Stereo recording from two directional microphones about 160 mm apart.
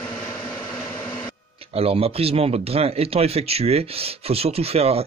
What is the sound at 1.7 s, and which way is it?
A man's voice, 35° right (ahead or behind).